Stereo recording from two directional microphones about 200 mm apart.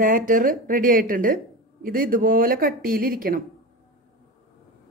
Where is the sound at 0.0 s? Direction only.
40° right (ahead or behind).